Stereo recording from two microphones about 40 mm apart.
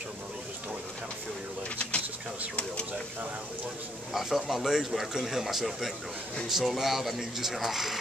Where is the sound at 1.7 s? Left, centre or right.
Left.